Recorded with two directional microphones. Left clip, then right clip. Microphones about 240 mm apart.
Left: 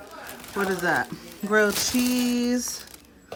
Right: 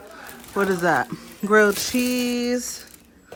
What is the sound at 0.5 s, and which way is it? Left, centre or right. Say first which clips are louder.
Speech: right 4 dB; centre.